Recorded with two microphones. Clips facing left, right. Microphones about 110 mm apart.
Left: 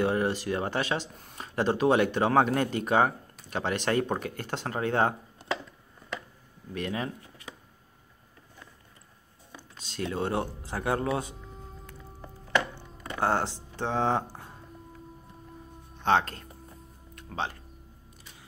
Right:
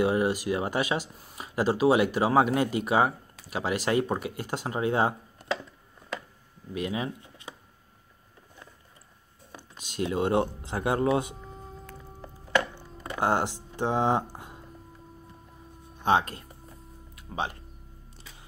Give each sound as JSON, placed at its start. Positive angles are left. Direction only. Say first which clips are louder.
{"t": 0.0, "sound": "speech", "louder": "right 2 dB", "side_deg": -10}
{"t": 6.7, "sound": "speech", "louder": "right 1 dB", "side_deg": -10}
{"t": 9.6, "sound": "speech", "louder": "right 3 dB", "side_deg": -15}
{"t": 13.0, "sound": "a sound", "louder": "right 1 dB", "side_deg": -15}
{"t": 16.0, "sound": "speech", "louder": "right 1 dB", "side_deg": -10}
{"t": 17.1, "sound": "music", "louder": "right 1 dB", "side_deg": -10}